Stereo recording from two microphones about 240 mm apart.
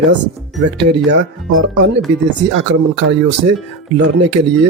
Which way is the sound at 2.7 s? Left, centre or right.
Right.